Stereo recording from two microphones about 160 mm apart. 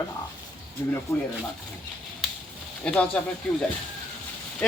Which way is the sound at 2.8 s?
5° left (ahead or behind).